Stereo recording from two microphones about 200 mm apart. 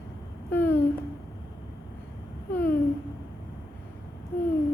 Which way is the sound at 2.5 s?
10° left (ahead or behind).